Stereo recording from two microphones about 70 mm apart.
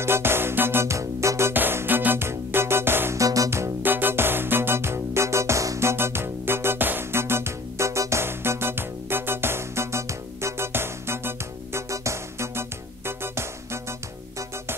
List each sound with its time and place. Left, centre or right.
0.0 s music: right
1.5 s music: right
3.2 s music: right
3.4 s music: right
3.8 s music: right